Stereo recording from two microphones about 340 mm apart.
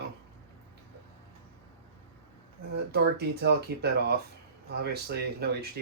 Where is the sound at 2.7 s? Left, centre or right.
Right.